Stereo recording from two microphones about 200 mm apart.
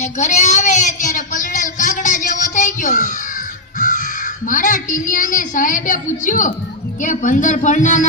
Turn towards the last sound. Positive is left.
turn(degrees=40)  # may be behind; listen again after turning